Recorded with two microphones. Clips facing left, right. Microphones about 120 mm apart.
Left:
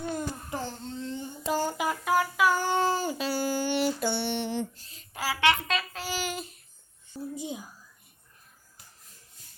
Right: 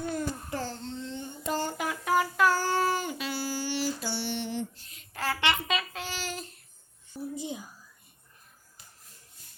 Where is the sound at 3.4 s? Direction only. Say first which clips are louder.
Left 5 dB; 50° left (ahead or behind).